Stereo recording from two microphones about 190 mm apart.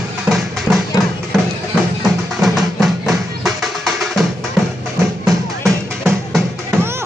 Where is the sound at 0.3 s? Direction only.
5° right (ahead or behind).